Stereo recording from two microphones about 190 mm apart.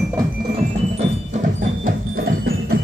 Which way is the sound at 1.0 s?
40° right (ahead or behind).